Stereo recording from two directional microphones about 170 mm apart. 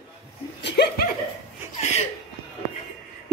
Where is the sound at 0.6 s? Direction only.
85° left.